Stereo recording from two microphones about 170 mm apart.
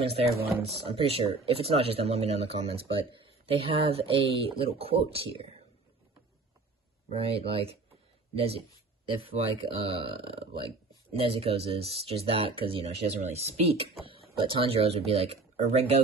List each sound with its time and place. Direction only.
0.0 s speech: 35° right (ahead or behind)
7.1 s speech: 35° right (ahead or behind)